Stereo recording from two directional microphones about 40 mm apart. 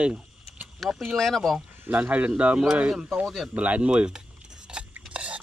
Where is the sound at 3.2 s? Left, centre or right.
Centre.